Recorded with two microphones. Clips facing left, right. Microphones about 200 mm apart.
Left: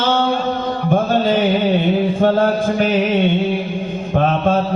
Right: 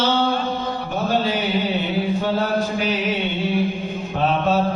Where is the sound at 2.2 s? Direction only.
50° left (ahead or behind).